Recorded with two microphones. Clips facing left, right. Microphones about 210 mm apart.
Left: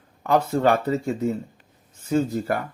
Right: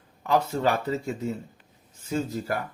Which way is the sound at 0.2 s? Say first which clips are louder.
Left 4 dB; 55° left (ahead or behind).